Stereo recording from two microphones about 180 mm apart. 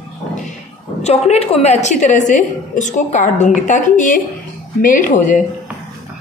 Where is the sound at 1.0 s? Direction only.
35° left (ahead or behind).